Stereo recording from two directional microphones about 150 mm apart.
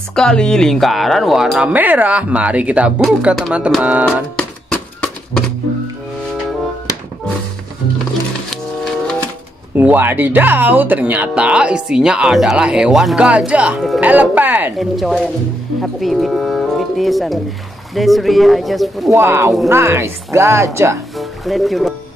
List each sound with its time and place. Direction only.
0.1 s speech: 5° left (ahead or behind)
4.4 s music: 5° left (ahead or behind)
9.8 s speech: 15° right (ahead or behind)
14.8 s speech: centre (ahead or behind)
19.1 s speech: 15° right (ahead or behind)
21.2 s speech: centre (ahead or behind)